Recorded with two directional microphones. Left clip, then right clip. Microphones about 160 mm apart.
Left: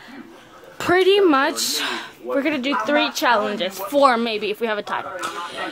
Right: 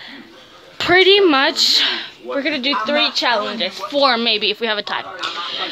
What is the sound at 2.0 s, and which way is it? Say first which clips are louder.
Speech: even; 20° left (ahead or behind).